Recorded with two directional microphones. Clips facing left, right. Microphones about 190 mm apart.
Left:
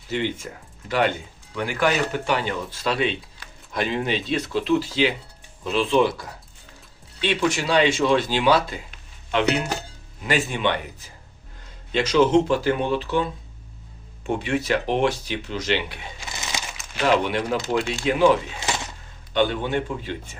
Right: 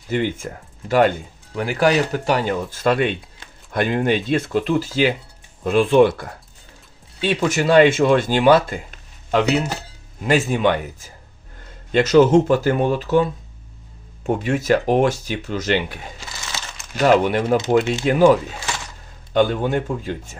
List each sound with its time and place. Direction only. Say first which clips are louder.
0.1 s speech: right 4 dB; 50° right (ahead or behind)
7.2 s speech: right 3 dB; 45° right (ahead or behind)
11.9 s speech: right 5 dB; 50° right (ahead or behind)
14.3 s speech: right 5 dB; 45° right (ahead or behind)
16.3 s a sound: left 3 dB; 20° left (ahead or behind)
16.9 s speech: right 5 dB; 45° right (ahead or behind)